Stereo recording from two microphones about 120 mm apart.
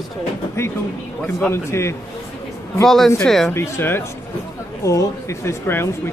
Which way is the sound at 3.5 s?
20° left (ahead or behind).